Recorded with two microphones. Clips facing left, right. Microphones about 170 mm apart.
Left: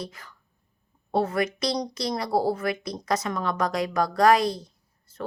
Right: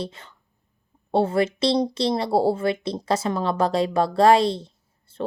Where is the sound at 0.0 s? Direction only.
25° right (ahead or behind).